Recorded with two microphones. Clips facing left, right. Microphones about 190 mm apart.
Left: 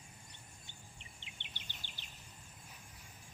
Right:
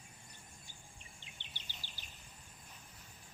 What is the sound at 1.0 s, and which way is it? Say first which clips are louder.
Bird vocalization: left 1 dB; 20° left (ahead or behind).